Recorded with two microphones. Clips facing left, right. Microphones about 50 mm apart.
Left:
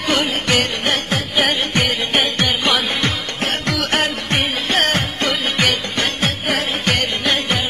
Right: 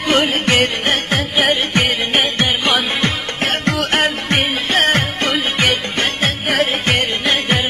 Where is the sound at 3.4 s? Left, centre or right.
Right.